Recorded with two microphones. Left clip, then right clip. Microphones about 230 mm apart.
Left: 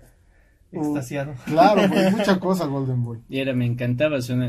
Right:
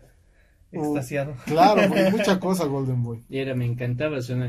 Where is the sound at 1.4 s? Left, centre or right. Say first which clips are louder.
Left 1 dB; right.